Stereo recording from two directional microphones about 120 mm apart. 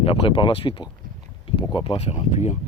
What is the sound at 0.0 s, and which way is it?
Speech, 50° left (ahead or behind).